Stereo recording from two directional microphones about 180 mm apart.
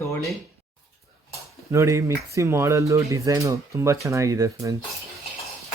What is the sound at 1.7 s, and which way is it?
Speech, 15° right (ahead or behind).